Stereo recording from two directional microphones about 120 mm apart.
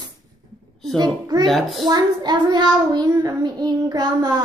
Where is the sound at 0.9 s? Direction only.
35° right (ahead or behind).